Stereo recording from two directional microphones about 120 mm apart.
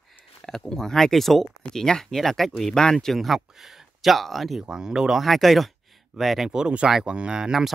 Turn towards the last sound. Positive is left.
turn(degrees=-5)  # may be behind; listen again after turning